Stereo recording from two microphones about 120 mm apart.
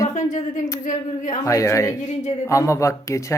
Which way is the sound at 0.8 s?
85° left.